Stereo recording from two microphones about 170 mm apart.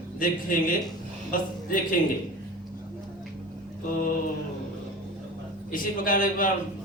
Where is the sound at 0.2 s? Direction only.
55° left (ahead or behind).